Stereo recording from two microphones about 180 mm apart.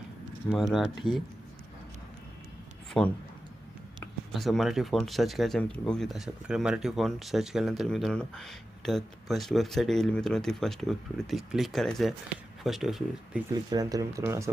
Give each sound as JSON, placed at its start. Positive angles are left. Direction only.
{"t": 0.5, "sound": "speech", "side_deg": 0}
{"t": 3.0, "sound": "speech", "side_deg": 5}
{"t": 4.3, "sound": "speech", "side_deg": 0}
{"t": 13.5, "sound": "speech", "side_deg": -20}